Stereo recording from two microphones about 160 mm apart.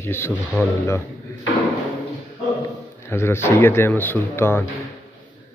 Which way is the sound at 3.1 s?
15° left (ahead or behind).